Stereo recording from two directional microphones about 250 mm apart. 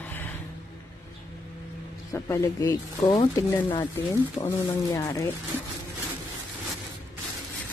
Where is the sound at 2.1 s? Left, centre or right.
Centre.